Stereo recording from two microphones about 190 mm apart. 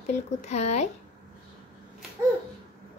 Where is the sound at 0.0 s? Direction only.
35° left (ahead or behind).